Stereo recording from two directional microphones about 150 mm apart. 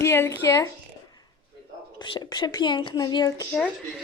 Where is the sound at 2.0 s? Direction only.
30° left (ahead or behind).